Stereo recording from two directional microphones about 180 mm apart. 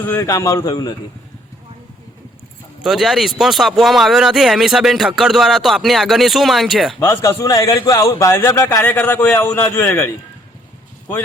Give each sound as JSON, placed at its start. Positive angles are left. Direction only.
{"t": 0.0, "sound": "a man's voice", "side_deg": 10}
{"t": 2.8, "sound": "speech", "side_deg": 0}
{"t": 7.0, "sound": "a man's voice", "side_deg": 15}